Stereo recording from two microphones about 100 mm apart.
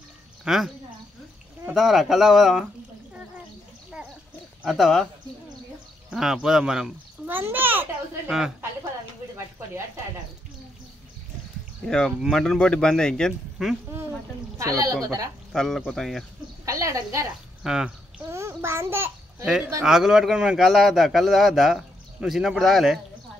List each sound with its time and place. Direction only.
0.5 s speech: 5° right (ahead or behind)
1.7 s speech: centre (ahead or behind)
4.6 s speech: centre (ahead or behind)
6.0 s speech: 5° right (ahead or behind)
7.2 s a sound: 20° right (ahead or behind)
8.3 s speech: 5° right (ahead or behind)
12.2 s speech: 5° left (ahead or behind)
14.6 s a woman's voice: 35° right (ahead or behind)
15.5 s speech: 5° left (ahead or behind)
16.6 s a woman's voice: 35° right (ahead or behind)
17.6 s speech: 5° right (ahead or behind)
18.2 s a child's voice: 25° right (ahead or behind)
19.8 s speech: 5° right (ahead or behind)